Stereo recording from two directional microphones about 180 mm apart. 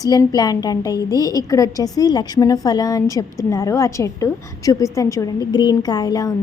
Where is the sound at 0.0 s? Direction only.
20° left (ahead or behind).